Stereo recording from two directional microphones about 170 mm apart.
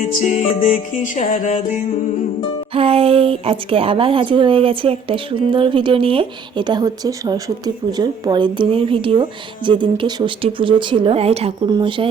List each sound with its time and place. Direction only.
0.0 s music: 45° left (ahead or behind)
2.7 s speech: 35° right (ahead or behind)